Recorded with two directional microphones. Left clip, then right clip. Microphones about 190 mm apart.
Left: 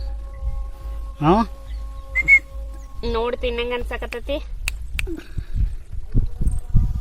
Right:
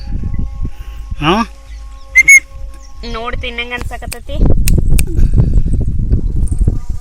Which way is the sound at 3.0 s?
55° left (ahead or behind).